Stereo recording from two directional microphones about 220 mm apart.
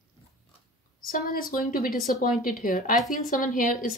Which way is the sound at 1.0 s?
40° left (ahead or behind).